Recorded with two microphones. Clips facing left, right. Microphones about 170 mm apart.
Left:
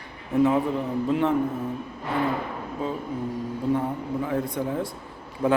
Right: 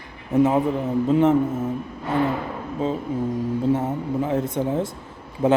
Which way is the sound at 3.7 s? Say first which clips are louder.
Even; 20° right (ahead or behind).